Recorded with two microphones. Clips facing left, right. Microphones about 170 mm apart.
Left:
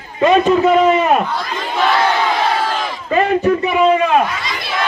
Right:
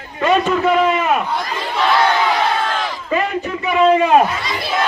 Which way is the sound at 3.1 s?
40° left (ahead or behind).